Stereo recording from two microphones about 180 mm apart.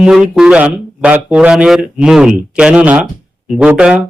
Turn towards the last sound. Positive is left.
turn(degrees=-10)  # may be behind; listen again after turning